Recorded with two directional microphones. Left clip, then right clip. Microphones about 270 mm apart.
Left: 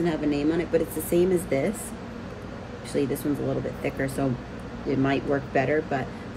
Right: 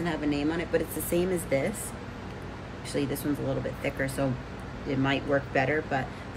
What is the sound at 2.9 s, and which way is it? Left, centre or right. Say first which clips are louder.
Speech: left 4 dB; centre.